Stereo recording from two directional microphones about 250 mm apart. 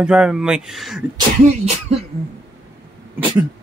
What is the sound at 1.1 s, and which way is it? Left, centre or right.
Speech, right.